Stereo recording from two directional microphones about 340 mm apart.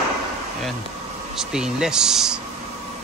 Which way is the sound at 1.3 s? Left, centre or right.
Centre.